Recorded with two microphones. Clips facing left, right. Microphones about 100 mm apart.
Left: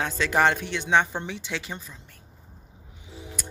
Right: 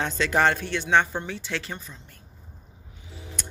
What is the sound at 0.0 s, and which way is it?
Speech, 10° left (ahead or behind).